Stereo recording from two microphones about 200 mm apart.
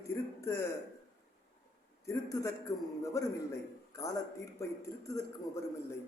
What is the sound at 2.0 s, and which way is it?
A man's voice, 15° left (ahead or behind).